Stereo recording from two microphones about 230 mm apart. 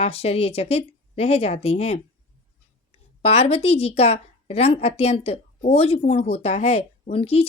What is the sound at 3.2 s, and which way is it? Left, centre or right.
A woman's voice, left.